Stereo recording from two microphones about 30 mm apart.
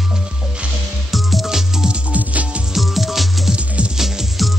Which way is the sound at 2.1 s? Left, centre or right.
Right.